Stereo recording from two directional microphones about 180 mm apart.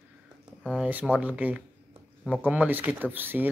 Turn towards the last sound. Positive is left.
turn(degrees=-10)  # may be behind; listen again after turning